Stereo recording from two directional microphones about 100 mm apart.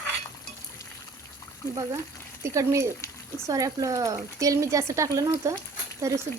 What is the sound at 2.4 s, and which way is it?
Speech, 30° right (ahead or behind).